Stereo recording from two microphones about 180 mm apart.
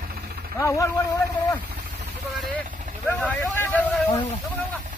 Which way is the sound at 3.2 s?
10° left (ahead or behind).